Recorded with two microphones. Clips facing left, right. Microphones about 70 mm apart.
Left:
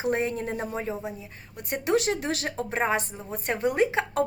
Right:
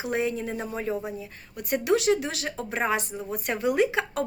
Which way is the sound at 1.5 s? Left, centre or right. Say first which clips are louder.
Right 4 dB; left.